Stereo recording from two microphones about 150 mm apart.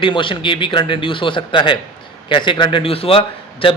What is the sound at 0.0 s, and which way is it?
A man's voice, 35° left (ahead or behind).